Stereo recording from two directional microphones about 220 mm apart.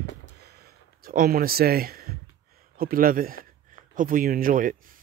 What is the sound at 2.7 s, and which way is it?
Speech, 40° right (ahead or behind).